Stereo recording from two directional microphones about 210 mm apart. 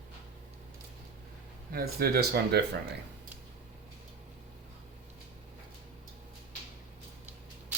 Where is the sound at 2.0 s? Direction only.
50° right (ahead or behind).